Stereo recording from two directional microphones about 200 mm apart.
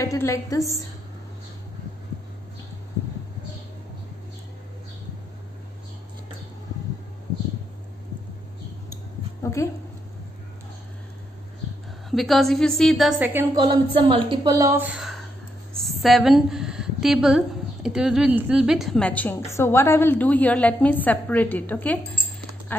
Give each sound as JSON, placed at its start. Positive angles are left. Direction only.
{"t": 0.0, "sound": "a woman's voice", "side_deg": 15}
{"t": 9.4, "sound": "a sound", "side_deg": 15}
{"t": 12.1, "sound": "a woman's voice", "side_deg": 0}
{"t": 13.6, "sound": "a woman's voice", "side_deg": -25}
{"t": 15.8, "sound": "a sound", "side_deg": 0}
{"t": 17.8, "sound": "a woman's voice", "side_deg": -5}